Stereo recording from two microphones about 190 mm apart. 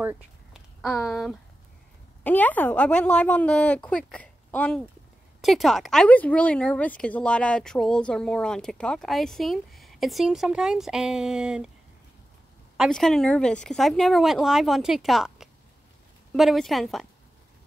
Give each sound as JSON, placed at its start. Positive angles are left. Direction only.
{"t": 0.0, "sound": "a sound", "side_deg": -10}
{"t": 0.8, "sound": "a woman's voice", "side_deg": 0}
{"t": 12.7, "sound": "speech", "side_deg": 0}